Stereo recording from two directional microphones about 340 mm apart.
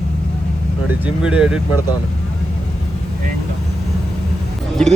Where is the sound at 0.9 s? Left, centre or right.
Centre.